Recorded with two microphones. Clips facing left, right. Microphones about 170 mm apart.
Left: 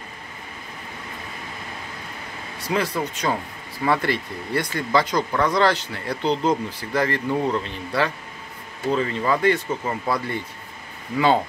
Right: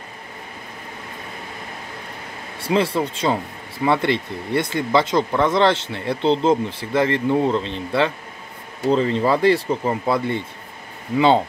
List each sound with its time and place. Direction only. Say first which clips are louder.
2.6 s speech: right 4 dB; 30° right (ahead or behind)
11.1 s speech: right 3 dB; 25° right (ahead or behind)